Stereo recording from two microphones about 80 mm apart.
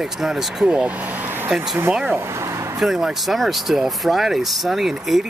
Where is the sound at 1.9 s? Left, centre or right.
Centre.